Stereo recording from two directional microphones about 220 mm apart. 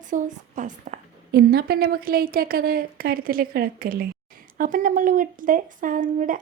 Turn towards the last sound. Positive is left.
turn(degrees=-35)  # may be behind; listen again after turning